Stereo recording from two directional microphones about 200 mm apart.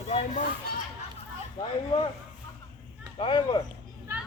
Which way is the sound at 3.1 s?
25° left (ahead or behind).